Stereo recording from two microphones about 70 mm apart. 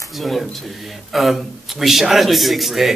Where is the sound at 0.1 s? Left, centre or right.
Centre.